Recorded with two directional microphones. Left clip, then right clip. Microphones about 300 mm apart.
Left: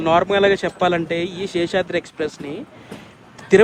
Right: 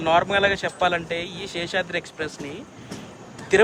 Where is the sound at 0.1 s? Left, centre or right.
Centre.